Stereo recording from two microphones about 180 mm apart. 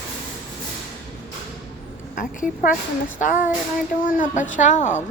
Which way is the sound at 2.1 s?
50° left (ahead or behind).